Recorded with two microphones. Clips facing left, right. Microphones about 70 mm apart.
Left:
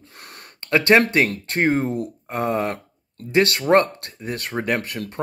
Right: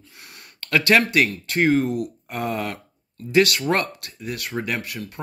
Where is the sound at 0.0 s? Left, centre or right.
Left.